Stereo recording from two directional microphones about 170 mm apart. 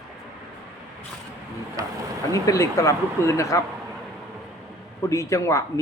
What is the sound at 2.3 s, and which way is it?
A man's voice, 20° left (ahead or behind).